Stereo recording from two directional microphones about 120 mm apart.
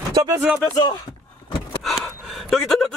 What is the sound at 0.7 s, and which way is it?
Speech, 35° left (ahead or behind).